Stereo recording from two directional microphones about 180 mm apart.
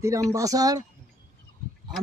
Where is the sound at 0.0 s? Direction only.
15° right (ahead or behind).